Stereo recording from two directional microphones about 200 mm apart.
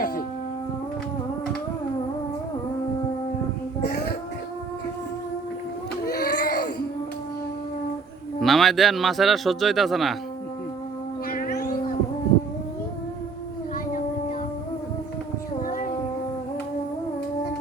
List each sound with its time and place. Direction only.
6.1 s baby cry: 50° left (ahead or behind)
8.4 s a man's voice: centre (ahead or behind)
11.3 s a sound: 45° left (ahead or behind)
15.6 s child singing: 40° left (ahead or behind)